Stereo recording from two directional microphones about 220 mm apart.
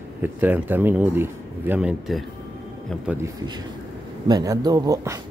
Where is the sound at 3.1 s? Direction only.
15° right (ahead or behind).